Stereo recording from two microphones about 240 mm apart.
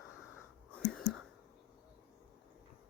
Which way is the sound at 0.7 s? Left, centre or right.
Centre.